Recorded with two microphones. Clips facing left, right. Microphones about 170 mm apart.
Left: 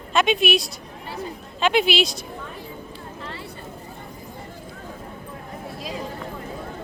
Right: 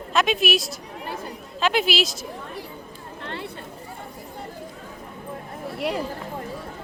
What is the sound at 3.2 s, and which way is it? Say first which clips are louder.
Vehicle: right 5 dB; 65° right (ahead or behind).